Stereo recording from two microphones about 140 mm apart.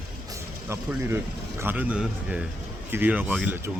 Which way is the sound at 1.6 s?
15° right (ahead or behind).